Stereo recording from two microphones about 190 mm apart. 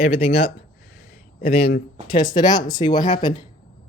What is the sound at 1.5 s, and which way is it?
Speech, 30° left (ahead or behind).